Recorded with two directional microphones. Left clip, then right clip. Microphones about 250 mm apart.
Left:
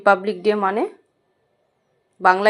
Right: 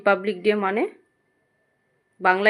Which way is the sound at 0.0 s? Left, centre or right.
Centre.